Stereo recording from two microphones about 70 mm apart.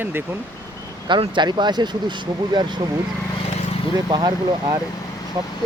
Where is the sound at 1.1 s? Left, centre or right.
Right.